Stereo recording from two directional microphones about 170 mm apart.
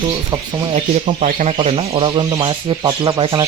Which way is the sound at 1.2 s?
45° right (ahead or behind).